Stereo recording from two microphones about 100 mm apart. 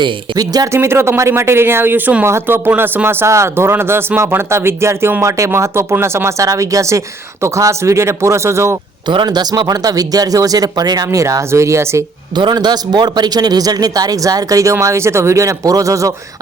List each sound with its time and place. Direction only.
0.0 s a man's voice: 40° right (ahead or behind)
0.8 s speech: 25° right (ahead or behind)
9.0 s a man's voice: 45° right (ahead or behind); by 12.0 s 30° right (ahead or behind)
12.4 s a man's voice: 45° right (ahead or behind)